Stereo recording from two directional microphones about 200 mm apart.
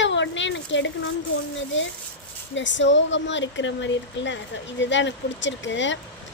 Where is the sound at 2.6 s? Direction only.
65° left (ahead or behind).